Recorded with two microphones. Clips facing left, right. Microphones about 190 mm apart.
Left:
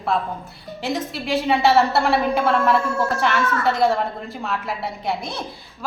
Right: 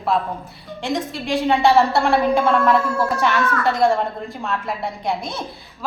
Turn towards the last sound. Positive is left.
turn(degrees=0)  # may be behind; listen again after turning